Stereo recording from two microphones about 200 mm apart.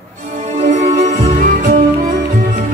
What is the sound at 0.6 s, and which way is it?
Music, 40° right (ahead or behind).